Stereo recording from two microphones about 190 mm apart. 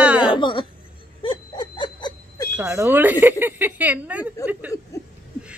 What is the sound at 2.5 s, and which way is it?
Speech, 15° right (ahead or behind).